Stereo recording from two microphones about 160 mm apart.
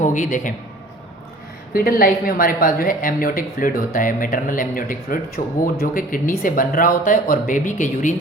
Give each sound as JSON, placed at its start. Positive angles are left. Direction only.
{"t": 0.0, "sound": "a man's voice", "side_deg": 55}
{"t": 1.7, "sound": "speech", "side_deg": 65}